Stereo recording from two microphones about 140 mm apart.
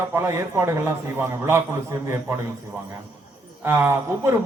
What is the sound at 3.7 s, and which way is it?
Speech, 15° right (ahead or behind).